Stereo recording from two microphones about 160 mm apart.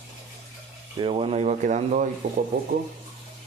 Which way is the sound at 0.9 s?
35° right (ahead or behind).